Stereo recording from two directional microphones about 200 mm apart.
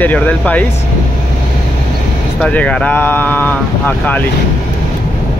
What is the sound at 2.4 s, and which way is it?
Speech, 5° left (ahead or behind).